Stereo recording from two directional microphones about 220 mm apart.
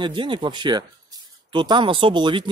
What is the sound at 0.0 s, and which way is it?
Speech, 20° right (ahead or behind).